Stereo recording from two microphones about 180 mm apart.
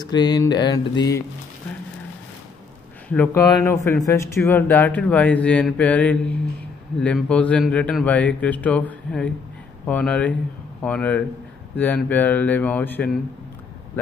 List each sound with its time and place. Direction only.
0.0 s mantra: 20° left (ahead or behind)
3.1 s speech: 10° left (ahead or behind)